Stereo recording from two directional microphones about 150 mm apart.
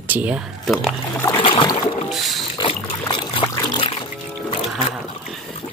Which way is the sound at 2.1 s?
Centre (ahead or behind).